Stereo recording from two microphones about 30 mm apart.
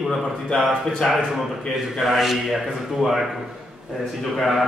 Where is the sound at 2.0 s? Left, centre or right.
Centre.